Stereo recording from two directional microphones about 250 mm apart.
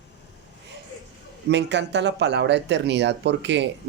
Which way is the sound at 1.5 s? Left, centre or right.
Right.